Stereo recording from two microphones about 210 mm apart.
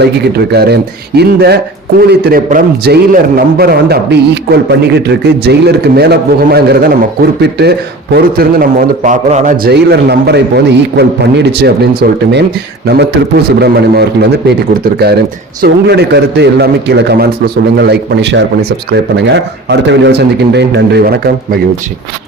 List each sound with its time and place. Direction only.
0.0 s a man's voice: 50° right (ahead or behind)
9.7 s a man's voice: 50° right (ahead or behind)
13.6 s a man's voice: 50° right (ahead or behind)